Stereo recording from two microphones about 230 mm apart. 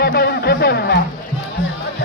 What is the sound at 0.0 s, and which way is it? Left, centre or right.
Music, left.